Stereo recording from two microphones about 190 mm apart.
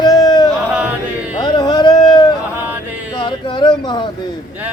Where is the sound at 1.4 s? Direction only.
20° left (ahead or behind).